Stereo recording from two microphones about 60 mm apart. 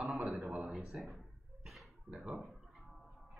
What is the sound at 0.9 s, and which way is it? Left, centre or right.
Speech, centre.